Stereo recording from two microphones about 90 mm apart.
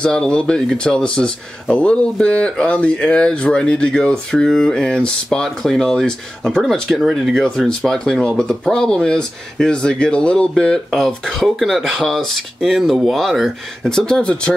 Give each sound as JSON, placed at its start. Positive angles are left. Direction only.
{"t": 0.0, "sound": "speech", "side_deg": 10}
{"t": 7.4, "sound": "speech", "side_deg": 5}